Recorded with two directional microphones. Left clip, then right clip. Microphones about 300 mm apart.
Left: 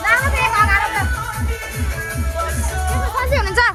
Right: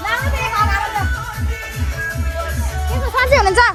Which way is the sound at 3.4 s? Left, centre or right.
Centre.